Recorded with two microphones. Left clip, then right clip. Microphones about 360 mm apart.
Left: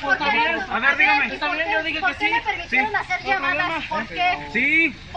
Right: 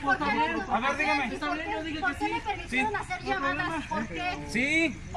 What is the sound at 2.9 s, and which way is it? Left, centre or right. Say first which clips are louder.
Speech: left 9 dB; centre.